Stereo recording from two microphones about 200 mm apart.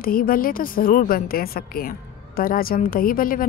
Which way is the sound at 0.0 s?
45° left (ahead or behind).